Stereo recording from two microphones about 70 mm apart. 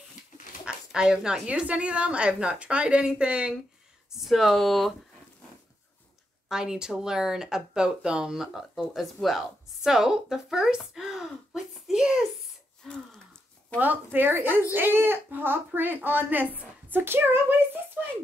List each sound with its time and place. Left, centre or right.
0.7 s speech: centre
4.2 s speech: centre
6.5 s speech: centre
13.7 s speech: right